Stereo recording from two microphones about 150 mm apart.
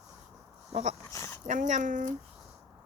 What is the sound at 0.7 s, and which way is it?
Speech, 45° right (ahead or behind).